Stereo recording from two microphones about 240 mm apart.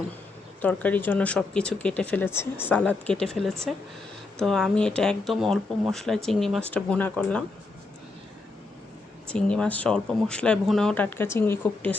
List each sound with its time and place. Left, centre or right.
0.6 s speech: centre
9.3 s speech: centre